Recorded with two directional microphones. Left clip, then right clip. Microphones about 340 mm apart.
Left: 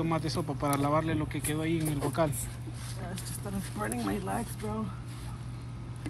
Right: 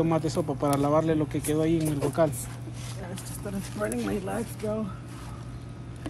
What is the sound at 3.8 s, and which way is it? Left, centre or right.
Speech, centre.